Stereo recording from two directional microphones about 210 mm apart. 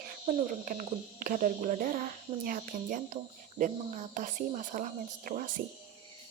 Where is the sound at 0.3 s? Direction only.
40° right (ahead or behind).